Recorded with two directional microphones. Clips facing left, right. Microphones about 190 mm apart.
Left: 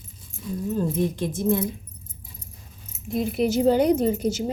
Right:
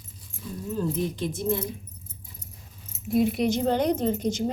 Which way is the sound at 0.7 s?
45° left (ahead or behind).